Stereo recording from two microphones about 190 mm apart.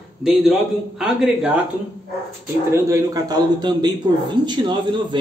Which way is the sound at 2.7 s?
20° right (ahead or behind).